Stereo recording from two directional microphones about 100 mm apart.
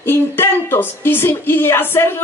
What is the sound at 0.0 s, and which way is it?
A woman's voice, 20° left (ahead or behind).